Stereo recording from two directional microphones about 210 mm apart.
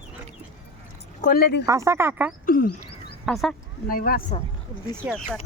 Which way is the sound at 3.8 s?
45° left (ahead or behind).